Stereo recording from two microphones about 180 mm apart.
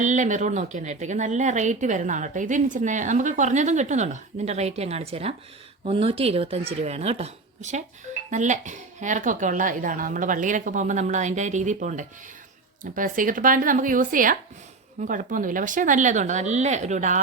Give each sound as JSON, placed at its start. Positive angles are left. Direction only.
{"t": 0.0, "sound": "a woman's voice", "side_deg": -45}